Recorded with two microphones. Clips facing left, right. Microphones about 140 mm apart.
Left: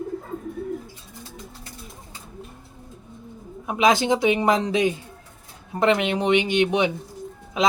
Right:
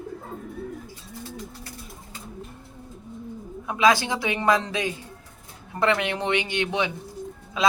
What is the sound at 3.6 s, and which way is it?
Speech, 20° left (ahead or behind).